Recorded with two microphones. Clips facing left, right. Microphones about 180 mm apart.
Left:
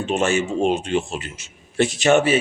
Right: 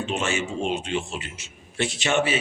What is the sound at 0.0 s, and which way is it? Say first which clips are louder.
A man's voice: left 6 dB; 45° left (ahead or behind).